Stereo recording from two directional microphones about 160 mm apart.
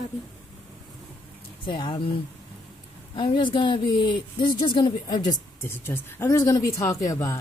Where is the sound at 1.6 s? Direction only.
30° left (ahead or behind).